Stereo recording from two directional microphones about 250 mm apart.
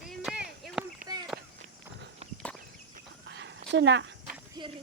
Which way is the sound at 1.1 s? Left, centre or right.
Centre.